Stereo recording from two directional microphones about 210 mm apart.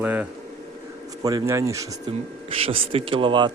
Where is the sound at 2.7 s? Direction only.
25° right (ahead or behind).